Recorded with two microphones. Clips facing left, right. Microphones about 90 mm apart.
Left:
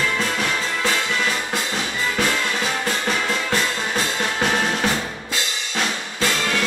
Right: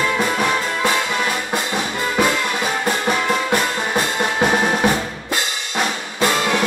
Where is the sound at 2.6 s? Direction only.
15° right (ahead or behind).